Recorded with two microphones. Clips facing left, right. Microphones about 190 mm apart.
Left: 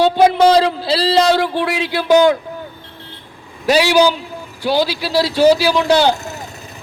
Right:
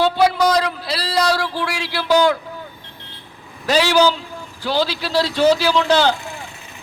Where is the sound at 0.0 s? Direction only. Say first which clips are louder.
Left 5 dB; 20° left (ahead or behind).